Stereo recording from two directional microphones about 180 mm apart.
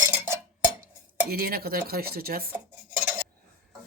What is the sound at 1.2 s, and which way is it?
Speech, 55° right (ahead or behind).